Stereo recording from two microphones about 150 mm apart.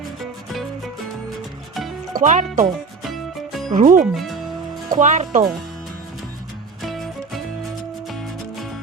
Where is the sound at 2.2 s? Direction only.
55° right (ahead or behind).